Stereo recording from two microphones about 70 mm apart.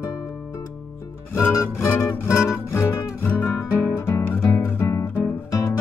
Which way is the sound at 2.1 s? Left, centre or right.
Left.